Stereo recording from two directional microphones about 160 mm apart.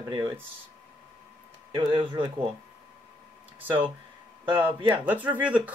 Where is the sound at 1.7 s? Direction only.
30° right (ahead or behind).